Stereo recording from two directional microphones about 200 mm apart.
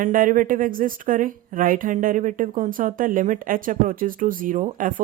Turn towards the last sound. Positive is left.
turn(degrees=-40)  # may be behind; listen again after turning